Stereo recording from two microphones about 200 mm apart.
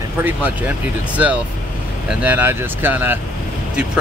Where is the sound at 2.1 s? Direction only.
10° right (ahead or behind).